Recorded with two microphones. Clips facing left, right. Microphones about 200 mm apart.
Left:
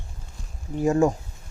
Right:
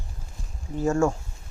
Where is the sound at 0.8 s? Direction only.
15° left (ahead or behind).